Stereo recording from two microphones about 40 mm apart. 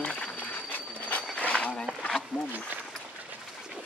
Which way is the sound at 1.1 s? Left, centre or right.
Left.